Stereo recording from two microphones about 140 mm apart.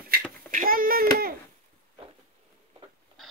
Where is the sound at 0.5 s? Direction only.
85° right.